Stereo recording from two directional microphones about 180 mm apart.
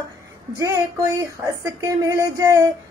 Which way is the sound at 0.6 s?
15° right (ahead or behind).